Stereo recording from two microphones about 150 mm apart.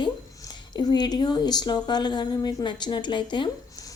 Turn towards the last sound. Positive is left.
turn(degrees=30)  # may be behind; listen again after turning